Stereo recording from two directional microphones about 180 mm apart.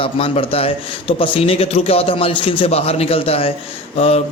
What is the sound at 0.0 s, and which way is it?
A man's voice, 30° left (ahead or behind).